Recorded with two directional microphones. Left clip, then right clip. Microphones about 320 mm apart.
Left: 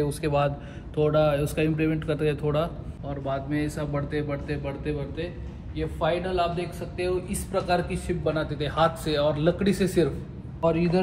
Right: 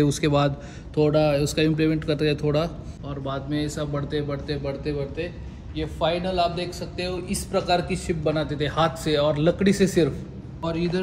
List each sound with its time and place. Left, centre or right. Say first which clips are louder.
1.0 s a man's voice: right 2 dB; centre
10.6 s a man's voice: left 3 dB; centre